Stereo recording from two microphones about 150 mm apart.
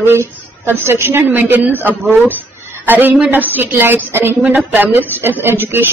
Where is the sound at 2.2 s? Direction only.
10° right (ahead or behind).